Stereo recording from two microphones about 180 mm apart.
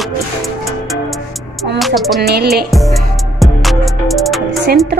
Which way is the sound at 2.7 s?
Centre (ahead or behind).